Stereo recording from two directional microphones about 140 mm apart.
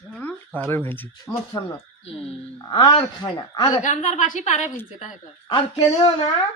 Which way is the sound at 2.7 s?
25° left (ahead or behind).